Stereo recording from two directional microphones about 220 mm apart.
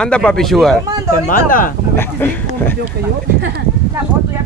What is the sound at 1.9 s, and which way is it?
Speech, 10° left (ahead or behind).